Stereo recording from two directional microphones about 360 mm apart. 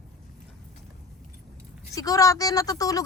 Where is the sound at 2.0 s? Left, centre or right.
Centre.